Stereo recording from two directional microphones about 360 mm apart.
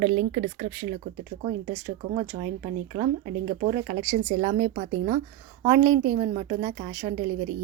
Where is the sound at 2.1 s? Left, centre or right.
Centre.